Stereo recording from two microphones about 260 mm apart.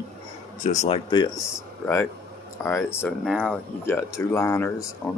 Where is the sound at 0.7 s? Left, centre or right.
Centre.